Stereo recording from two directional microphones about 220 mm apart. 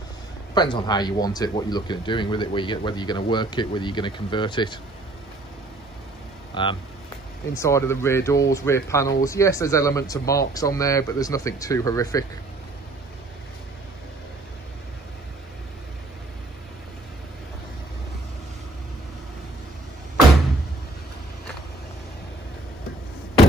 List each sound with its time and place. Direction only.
0.6 s speech: 20° left (ahead or behind)
6.5 s speech: 20° left (ahead or behind)